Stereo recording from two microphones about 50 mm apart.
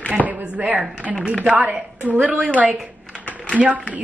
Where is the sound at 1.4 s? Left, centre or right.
Right.